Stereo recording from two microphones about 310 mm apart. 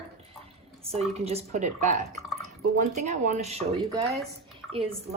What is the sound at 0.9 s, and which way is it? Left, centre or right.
Speech, centre.